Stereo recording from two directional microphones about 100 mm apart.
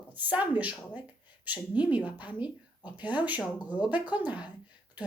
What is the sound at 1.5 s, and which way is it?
A woman's voice, 15° right (ahead or behind).